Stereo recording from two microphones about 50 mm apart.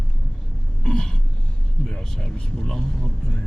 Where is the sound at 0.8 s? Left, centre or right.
Centre.